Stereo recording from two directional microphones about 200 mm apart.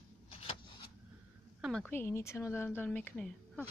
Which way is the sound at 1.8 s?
10° left (ahead or behind).